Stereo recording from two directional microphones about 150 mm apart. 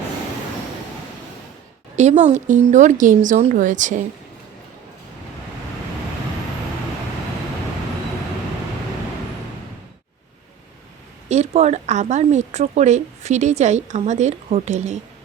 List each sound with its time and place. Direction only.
2.0 s speech: 50° right (ahead or behind)
11.3 s speech: 45° right (ahead or behind)